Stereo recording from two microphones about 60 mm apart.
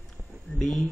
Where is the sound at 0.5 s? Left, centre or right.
Centre.